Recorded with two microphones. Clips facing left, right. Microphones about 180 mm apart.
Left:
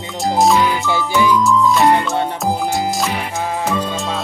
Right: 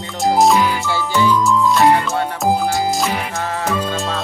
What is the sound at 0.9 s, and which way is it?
Music, 15° left (ahead or behind).